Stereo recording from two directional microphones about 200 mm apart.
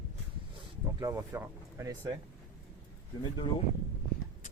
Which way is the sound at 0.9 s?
15° right (ahead or behind).